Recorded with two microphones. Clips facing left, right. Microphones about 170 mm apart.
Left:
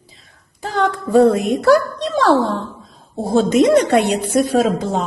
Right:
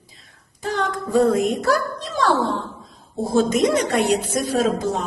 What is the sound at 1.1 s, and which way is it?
A woman's voice, 70° left (ahead or behind).